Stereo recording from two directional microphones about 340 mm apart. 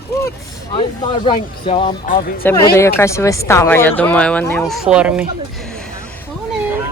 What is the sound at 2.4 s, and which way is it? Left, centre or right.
A woman's voice, centre.